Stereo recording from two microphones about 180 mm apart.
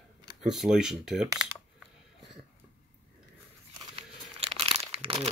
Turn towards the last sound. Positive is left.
turn(degrees=-30)  # may be behind; listen again after turning